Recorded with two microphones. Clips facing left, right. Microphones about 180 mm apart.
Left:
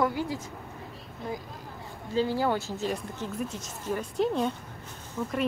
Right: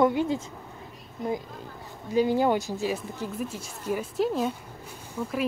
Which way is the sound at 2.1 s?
15° right (ahead or behind).